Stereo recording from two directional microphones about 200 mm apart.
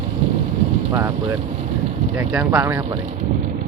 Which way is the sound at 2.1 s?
5° right (ahead or behind).